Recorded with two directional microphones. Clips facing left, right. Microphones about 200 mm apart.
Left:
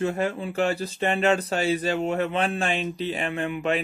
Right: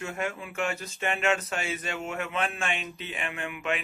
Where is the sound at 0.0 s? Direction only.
35° left (ahead or behind).